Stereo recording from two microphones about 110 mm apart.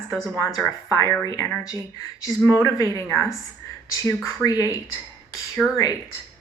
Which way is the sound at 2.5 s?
25° left (ahead or behind).